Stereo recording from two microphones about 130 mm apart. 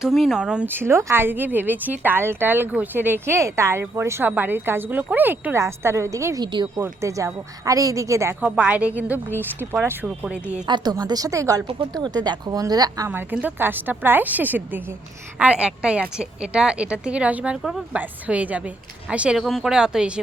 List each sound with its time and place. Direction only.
0.0 s speech: centre (ahead or behind); by 6.7 s 35° right (ahead or behind)
6.7 s speech: 20° right (ahead or behind)
10.9 s speech: 30° right (ahead or behind)
13.1 s speech: 15° right (ahead or behind)